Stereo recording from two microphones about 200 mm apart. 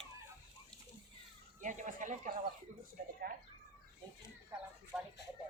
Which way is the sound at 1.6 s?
40° right (ahead or behind).